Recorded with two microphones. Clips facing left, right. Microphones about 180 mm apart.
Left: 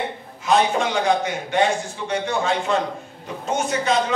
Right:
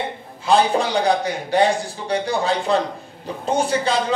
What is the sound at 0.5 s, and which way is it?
A man's voice, 35° right (ahead or behind).